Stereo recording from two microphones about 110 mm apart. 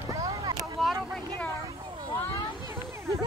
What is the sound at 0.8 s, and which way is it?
Speech, centre (ahead or behind).